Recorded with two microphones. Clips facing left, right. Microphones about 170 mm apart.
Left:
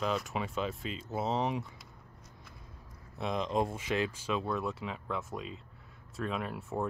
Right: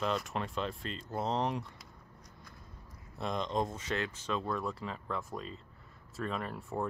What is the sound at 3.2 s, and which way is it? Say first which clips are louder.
Speech: left 2 dB; 5° left (ahead or behind).